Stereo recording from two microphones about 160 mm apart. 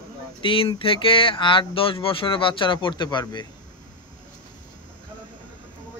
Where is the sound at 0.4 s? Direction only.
30° left (ahead or behind).